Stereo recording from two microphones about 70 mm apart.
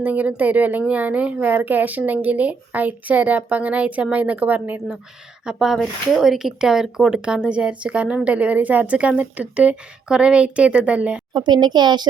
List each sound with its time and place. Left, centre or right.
0.0 s speech: right
5.5 s speech: centre
11.3 s speech: right